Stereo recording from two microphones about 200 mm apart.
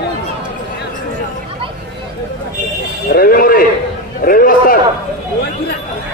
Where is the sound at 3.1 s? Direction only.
45° left (ahead or behind).